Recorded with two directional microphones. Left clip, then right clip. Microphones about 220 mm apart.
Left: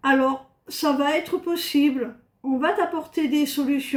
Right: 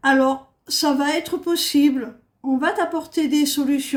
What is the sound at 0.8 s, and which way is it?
Speech, 55° right (ahead or behind).